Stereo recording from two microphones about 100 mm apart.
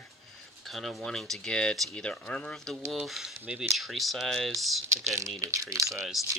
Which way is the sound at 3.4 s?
15° right (ahead or behind).